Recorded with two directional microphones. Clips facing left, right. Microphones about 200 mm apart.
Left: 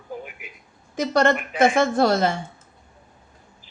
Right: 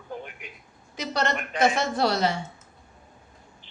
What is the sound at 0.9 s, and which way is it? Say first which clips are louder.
Speech: left 8 dB; 50° left (ahead or behind).